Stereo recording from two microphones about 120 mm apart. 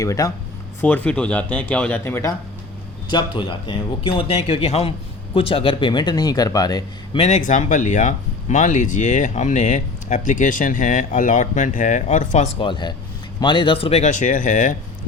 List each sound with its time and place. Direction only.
0.0 s speech: 25° left (ahead or behind)
0.8 s speech: 15° left (ahead or behind)
3.1 s speech: 40° left (ahead or behind)
7.2 s speech: 75° left (ahead or behind)
12.5 s speech: 40° left (ahead or behind)
14.0 s speech: 90° left